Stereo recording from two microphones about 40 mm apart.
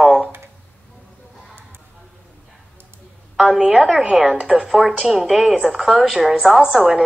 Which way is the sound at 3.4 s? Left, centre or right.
Centre.